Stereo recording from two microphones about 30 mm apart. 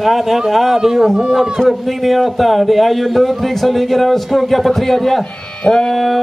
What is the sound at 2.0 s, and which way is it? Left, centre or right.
A man's voice, centre.